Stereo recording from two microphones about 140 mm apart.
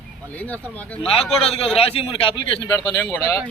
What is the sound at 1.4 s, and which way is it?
Speech, 45° left (ahead or behind).